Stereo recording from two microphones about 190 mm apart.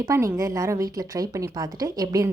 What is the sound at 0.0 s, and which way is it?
A woman's voice, 15° right (ahead or behind).